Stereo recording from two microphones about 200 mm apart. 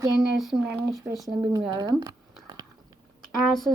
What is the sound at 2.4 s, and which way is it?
Biting, 20° right (ahead or behind).